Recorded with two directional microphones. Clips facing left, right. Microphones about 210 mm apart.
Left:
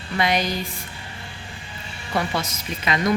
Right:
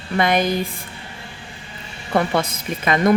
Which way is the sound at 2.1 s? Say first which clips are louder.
Right 6 dB; 55° right (ahead or behind).